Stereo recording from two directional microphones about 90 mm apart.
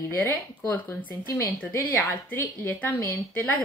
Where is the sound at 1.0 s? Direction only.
65° left (ahead or behind).